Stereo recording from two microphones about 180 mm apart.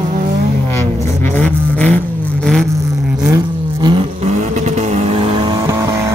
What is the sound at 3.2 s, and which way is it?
Vehicle, 20° right (ahead or behind).